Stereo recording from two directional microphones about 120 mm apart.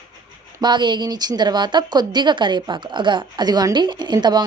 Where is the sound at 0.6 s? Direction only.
40° right (ahead or behind).